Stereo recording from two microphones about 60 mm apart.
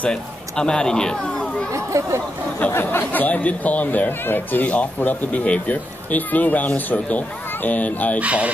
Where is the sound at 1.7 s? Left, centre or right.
Right.